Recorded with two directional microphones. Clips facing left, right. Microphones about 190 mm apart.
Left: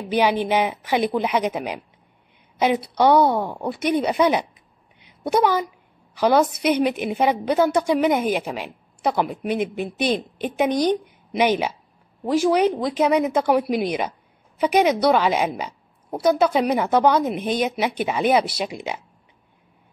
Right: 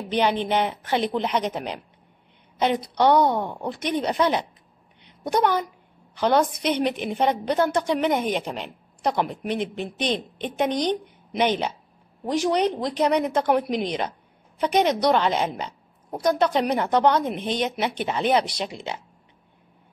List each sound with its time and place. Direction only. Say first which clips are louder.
0.1 s a woman's voice: left 3 dB; 10° left (ahead or behind)